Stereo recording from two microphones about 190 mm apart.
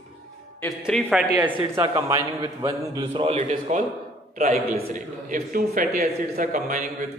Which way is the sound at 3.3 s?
40° right (ahead or behind).